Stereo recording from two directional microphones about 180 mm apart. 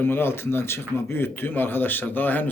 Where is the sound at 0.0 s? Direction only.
10° left (ahead or behind).